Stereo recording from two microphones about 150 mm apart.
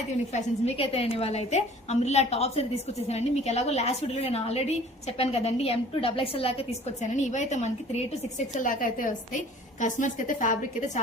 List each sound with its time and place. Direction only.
0.3 s a woman's voice: 45° left (ahead or behind)
7.0 s a woman's voice: 55° left (ahead or behind)
8.5 s a woman's voice: 60° left (ahead or behind)